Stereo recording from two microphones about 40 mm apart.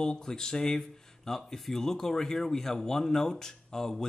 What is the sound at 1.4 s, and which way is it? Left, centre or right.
Speech, centre.